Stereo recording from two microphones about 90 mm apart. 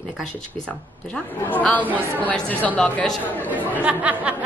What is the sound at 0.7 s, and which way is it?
A woman's voice, 20° left (ahead or behind).